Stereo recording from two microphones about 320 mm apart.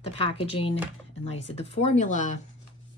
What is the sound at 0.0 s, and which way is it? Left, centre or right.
Speech, centre.